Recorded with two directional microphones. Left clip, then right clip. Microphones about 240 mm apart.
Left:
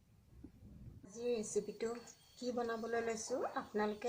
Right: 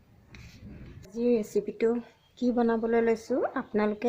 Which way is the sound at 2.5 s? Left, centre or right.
Right.